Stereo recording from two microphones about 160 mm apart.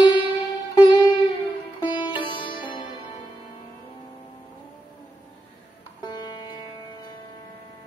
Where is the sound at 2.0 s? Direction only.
30° left (ahead or behind).